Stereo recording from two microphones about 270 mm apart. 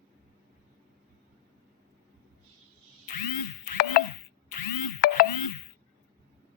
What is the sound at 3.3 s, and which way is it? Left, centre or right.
Music, left.